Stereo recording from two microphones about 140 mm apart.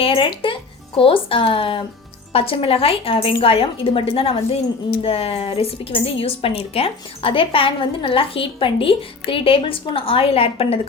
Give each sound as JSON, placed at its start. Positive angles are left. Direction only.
{"t": 0.0, "sound": "a woman's voice", "side_deg": 40}